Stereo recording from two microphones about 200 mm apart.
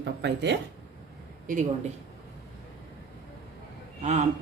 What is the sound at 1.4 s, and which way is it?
Speech, 40° right (ahead or behind).